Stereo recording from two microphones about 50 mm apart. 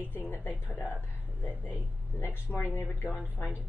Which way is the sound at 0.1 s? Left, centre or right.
Left.